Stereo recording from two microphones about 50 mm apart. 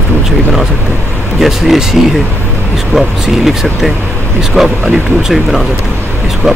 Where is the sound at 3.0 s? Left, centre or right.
Centre.